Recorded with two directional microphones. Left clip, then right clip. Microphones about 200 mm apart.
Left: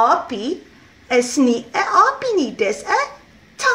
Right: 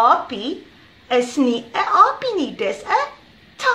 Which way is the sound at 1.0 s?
35° left (ahead or behind).